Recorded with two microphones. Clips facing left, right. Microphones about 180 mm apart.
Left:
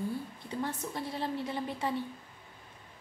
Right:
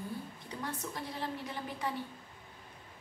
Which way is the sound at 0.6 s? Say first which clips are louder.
Left 4 dB; 25° left (ahead or behind).